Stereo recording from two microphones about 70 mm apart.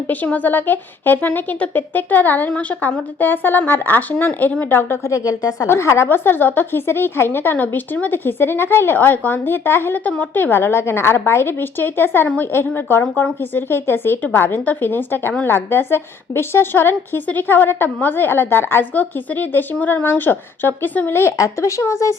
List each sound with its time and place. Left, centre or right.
0.1 s a woman's voice: left
5.0 s speech: left
5.6 s a woman's voice: left
21.3 s speech: left